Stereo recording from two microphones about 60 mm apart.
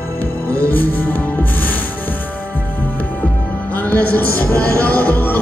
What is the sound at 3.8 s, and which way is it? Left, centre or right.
Music, left.